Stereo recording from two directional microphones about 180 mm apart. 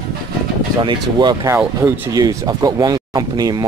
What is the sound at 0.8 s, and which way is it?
Speech, 25° right (ahead or behind).